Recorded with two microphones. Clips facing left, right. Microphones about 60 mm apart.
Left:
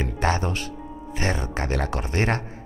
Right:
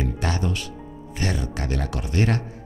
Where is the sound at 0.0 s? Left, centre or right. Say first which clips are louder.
Left 2 dB; left.